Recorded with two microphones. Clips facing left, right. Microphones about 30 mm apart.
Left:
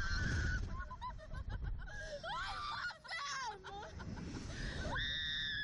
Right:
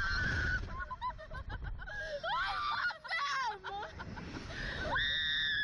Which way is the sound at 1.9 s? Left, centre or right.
Right.